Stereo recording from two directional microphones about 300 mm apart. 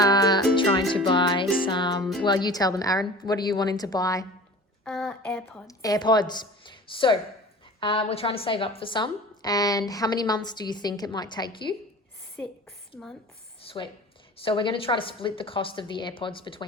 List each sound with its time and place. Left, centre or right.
0.0 s music: centre
0.9 s speech: centre
1.6 s music: centre
2.2 s a woman's voice: centre
13.6 s a sound: centre
14.3 s a woman's voice: centre